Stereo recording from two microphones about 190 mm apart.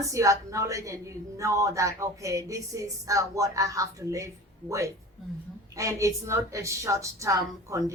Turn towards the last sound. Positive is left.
turn(degrees=-15)  # may be behind; listen again after turning